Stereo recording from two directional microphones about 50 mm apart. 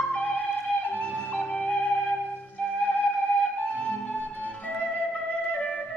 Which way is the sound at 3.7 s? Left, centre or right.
Left.